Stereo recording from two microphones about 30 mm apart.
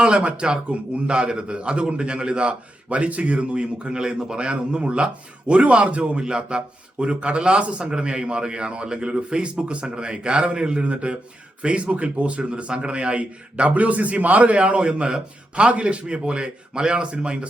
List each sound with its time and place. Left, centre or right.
0.0 s a man's voice: right
2.9 s speech: right
3.3 s a man's voice: right
6.2 s speech: right
7.0 s a man's voice: right